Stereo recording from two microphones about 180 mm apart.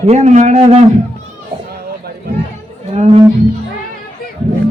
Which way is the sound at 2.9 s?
35° right (ahead or behind).